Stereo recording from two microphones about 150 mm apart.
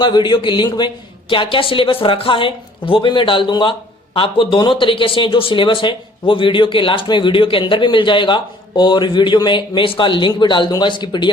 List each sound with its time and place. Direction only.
0.0 s speech: 30° left (ahead or behind)